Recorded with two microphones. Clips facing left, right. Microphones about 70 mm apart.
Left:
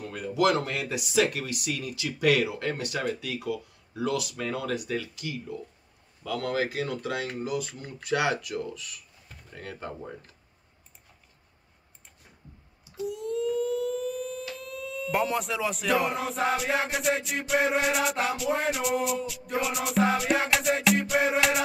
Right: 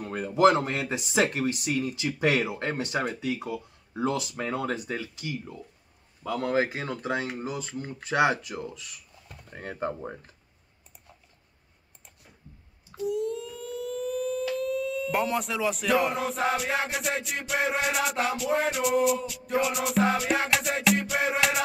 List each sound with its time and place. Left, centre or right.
0.0 s speech: right
13.0 s siren: centre